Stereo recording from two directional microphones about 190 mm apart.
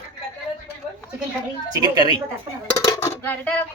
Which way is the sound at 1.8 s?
20° right (ahead or behind).